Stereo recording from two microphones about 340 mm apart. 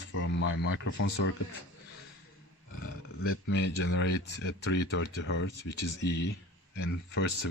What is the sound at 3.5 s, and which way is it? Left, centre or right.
Speech, left.